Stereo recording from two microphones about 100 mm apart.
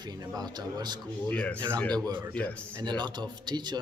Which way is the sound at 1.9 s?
45° right (ahead or behind).